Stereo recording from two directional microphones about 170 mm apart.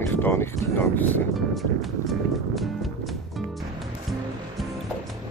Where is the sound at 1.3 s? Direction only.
Centre (ahead or behind).